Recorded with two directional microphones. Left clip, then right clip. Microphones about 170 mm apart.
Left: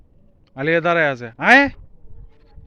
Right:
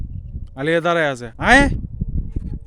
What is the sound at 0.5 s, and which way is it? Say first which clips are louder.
A man's voice: even; 30° right (ahead or behind).